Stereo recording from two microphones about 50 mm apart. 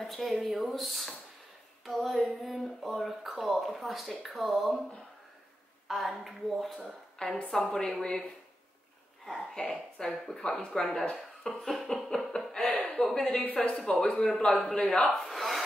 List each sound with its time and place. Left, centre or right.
0.0 s speech: centre
5.9 s speech: centre
7.2 s speech: centre
9.4 s a woman's voice: centre
12.6 s a sound: left
12.9 s speech: centre
13.3 s speech: left
15.0 s a sound: centre